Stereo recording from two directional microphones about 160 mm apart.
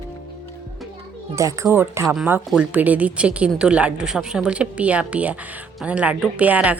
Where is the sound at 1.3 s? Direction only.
20° right (ahead or behind).